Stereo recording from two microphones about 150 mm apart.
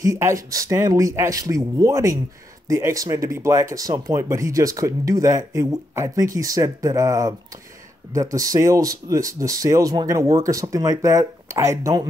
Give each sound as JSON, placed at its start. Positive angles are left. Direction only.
{"t": 0.0, "sound": "speech", "side_deg": -20}